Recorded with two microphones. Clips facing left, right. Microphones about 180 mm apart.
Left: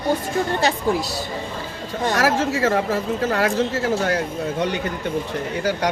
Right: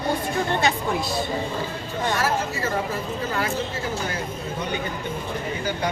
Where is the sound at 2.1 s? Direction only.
90° left.